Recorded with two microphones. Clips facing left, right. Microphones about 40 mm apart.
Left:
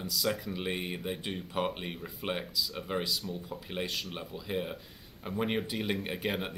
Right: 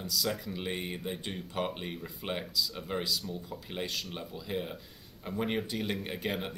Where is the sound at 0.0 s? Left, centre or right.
Centre.